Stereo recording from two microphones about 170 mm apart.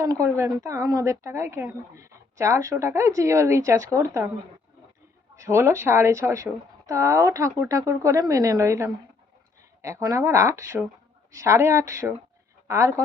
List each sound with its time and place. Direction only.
0.0 s speech: 20° right (ahead or behind)
5.4 s speech: 15° right (ahead or behind)